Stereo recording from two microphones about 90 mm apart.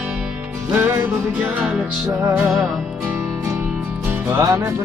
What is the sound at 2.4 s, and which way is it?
Music, 5° left (ahead or behind).